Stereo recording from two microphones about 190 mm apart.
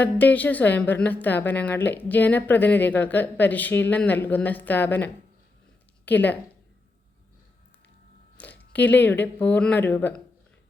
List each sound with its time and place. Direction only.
0.0 s a woman's voice: 10° left (ahead or behind)
8.4 s a woman's voice: 10° left (ahead or behind)